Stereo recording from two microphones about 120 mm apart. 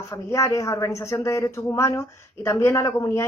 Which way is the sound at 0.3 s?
25° left (ahead or behind).